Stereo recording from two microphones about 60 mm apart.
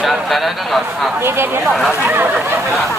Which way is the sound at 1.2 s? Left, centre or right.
Right.